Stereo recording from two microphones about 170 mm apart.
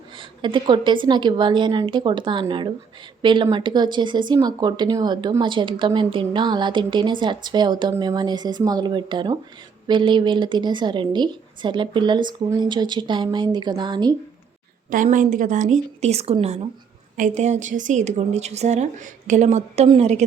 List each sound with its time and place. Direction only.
0.2 s speech: 30° right (ahead or behind)
14.8 s a woman's voice: 50° right (ahead or behind); by 16.6 s 35° right (ahead or behind)
17.2 s a woman's voice: 45° right (ahead or behind)